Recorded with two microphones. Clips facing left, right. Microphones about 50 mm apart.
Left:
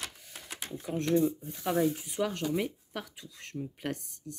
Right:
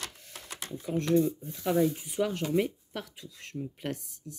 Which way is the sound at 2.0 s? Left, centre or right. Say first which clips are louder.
Right 2 dB; centre.